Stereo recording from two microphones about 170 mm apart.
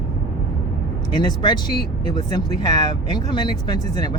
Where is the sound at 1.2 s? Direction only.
25° left (ahead or behind).